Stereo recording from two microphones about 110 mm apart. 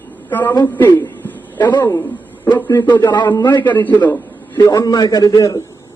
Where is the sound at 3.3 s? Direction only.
40° left (ahead or behind).